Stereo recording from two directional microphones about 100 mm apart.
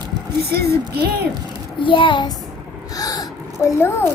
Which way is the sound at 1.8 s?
55° left (ahead or behind).